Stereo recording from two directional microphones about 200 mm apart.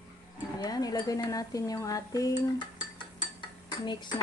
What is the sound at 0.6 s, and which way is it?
Speech, 20° left (ahead or behind).